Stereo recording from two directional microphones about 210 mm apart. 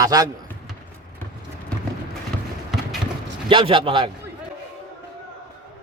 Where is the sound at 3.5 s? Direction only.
25° right (ahead or behind).